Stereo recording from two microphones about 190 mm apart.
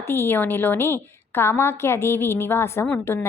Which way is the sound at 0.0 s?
10° left (ahead or behind).